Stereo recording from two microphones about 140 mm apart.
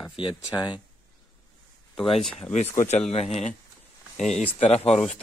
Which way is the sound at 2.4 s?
50° left (ahead or behind).